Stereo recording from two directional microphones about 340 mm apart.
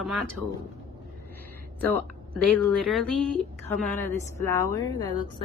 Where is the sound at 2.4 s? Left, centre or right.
Centre.